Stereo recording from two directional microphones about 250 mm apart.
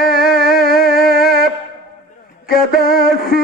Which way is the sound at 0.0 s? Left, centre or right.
Left.